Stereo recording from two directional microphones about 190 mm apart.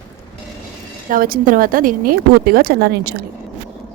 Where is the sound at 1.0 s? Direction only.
50° right (ahead or behind).